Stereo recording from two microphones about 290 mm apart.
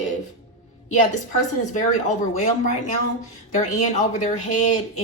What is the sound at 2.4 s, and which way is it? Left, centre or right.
Speech, left.